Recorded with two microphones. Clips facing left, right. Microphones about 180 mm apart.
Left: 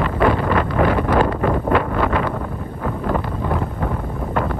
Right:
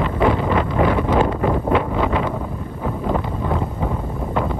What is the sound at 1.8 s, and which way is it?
Wind noise, 10° right (ahead or behind).